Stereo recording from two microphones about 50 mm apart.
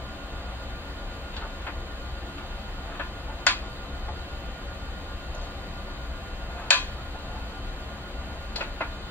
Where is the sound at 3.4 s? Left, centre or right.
Left.